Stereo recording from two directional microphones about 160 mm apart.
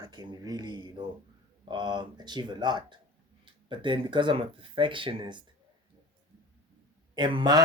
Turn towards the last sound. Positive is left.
turn(degrees=-25)  # may be behind; listen again after turning